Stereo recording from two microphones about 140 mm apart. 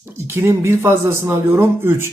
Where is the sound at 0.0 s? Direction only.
15° right (ahead or behind).